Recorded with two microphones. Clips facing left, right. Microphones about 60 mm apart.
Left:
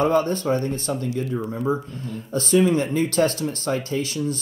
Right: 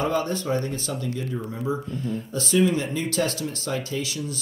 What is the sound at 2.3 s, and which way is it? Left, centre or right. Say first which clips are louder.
Speech: left 4 dB; left.